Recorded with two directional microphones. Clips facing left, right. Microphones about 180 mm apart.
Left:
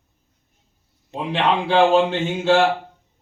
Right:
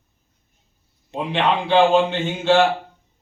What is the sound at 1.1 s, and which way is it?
Speech, 5° left (ahead or behind).